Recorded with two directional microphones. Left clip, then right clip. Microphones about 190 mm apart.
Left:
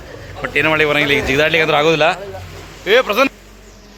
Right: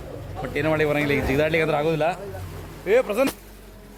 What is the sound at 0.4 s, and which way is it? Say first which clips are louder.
Speech: left 8 dB; centre (ahead or behind).